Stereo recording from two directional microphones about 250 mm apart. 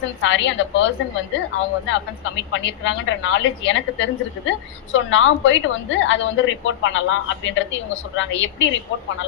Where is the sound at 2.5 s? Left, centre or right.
Left.